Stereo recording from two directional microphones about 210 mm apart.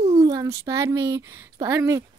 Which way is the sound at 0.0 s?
30° right (ahead or behind).